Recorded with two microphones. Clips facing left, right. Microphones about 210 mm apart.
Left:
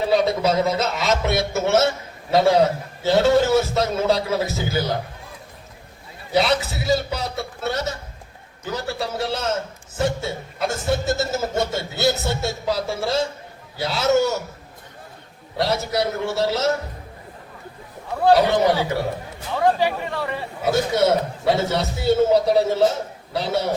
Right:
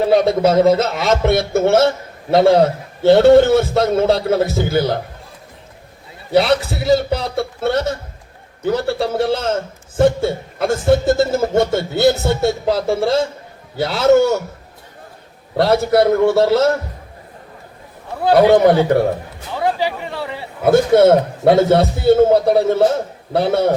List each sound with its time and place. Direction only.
0.0 s a man's voice: 55° right (ahead or behind)
6.3 s a man's voice: 55° right (ahead or behind)
15.5 s a man's voice: 55° right (ahead or behind)
18.3 s a man's voice: 55° right (ahead or behind)
19.5 s speech: 10° right (ahead or behind)
20.6 s a man's voice: 55° right (ahead or behind)